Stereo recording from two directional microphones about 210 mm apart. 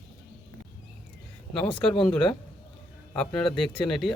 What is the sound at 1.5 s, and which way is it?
A man's voice, 5° left (ahead or behind).